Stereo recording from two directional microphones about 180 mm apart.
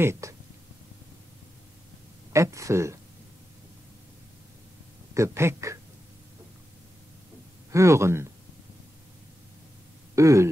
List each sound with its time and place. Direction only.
0.0 s speech: 15° right (ahead or behind)
2.3 s speech: 15° right (ahead or behind)
5.1 s speech: 15° right (ahead or behind)
7.7 s speech: 15° right (ahead or behind)
10.1 s speech: 15° right (ahead or behind)